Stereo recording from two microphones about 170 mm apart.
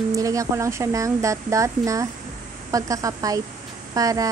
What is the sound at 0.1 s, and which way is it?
Speech, 20° right (ahead or behind).